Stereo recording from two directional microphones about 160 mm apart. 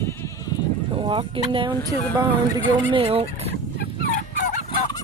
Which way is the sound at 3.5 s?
90° left.